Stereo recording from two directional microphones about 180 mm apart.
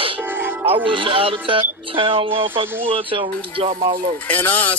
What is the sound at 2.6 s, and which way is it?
Speech, 10° right (ahead or behind).